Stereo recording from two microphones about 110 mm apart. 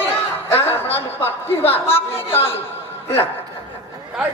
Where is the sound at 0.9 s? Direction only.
20° left (ahead or behind).